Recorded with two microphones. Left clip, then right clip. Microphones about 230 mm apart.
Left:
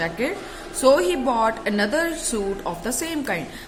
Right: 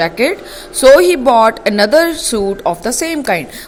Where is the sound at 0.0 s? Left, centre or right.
Right.